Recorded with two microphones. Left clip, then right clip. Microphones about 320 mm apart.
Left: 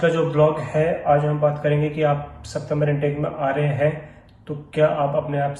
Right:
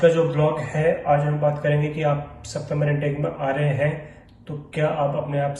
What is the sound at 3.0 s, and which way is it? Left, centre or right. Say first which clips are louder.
Speech: left 2 dB; centre.